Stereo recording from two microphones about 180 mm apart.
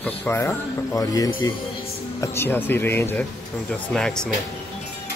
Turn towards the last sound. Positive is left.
turn(degrees=5)  # may be behind; listen again after turning